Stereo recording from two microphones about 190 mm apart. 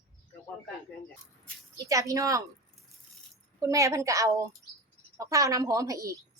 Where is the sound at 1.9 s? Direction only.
15° right (ahead or behind).